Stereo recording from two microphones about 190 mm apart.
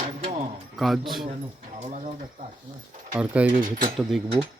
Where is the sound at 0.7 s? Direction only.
Centre (ahead or behind).